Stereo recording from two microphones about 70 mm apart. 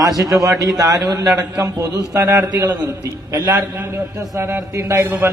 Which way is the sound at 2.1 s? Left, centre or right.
Right.